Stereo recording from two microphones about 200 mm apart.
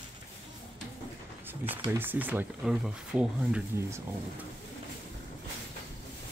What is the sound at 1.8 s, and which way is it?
Speech, 10° right (ahead or behind).